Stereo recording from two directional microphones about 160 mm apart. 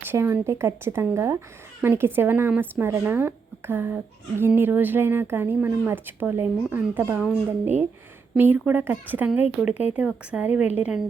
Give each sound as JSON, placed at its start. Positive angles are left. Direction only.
{"t": 0.0, "sound": "speech", "side_deg": -15}
{"t": 8.4, "sound": "speech", "side_deg": -10}